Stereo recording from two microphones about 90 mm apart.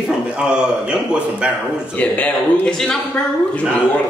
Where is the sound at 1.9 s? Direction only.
15° left (ahead or behind).